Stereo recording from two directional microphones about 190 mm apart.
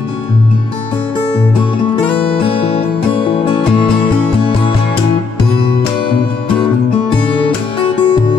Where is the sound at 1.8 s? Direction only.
30° left (ahead or behind).